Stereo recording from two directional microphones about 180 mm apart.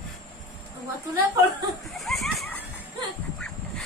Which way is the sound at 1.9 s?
Centre (ahead or behind).